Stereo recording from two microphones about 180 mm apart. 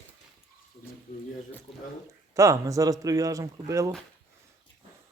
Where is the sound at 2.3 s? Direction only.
20° right (ahead or behind).